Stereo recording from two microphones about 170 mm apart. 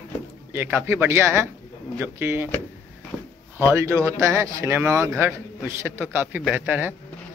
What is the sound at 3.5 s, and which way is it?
Speech, 15° right (ahead or behind).